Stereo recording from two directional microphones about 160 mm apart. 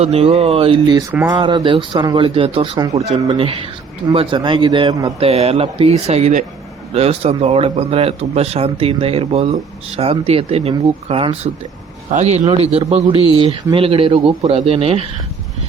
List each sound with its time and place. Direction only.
0.0 s speech: 40° right (ahead or behind)
2.7 s speech: 20° right (ahead or behind)
3.2 s speech: 35° right (ahead or behind)
5.2 s speech: 40° right (ahead or behind)